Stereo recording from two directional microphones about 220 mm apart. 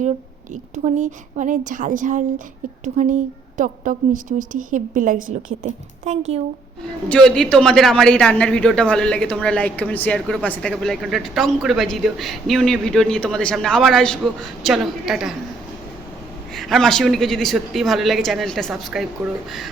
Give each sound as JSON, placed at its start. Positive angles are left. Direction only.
{"t": 0.5, "sound": "a woman's voice", "side_deg": -35}
{"t": 7.1, "sound": "a woman's voice", "side_deg": 5}
{"t": 16.6, "sound": "a woman's voice", "side_deg": 0}